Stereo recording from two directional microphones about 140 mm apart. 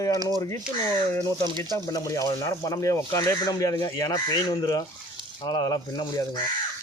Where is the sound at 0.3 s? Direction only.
20° left (ahead or behind).